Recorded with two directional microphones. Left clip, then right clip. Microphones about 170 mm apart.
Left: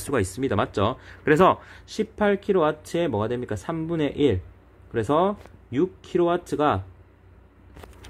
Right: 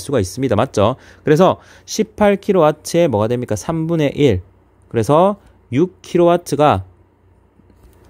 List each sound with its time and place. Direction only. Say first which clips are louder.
0.1 s speech: right 7 dB; 40° right (ahead or behind)